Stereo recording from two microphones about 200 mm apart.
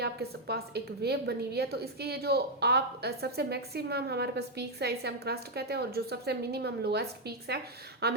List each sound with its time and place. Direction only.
0.0 s a woman's voice: 55° right (ahead or behind)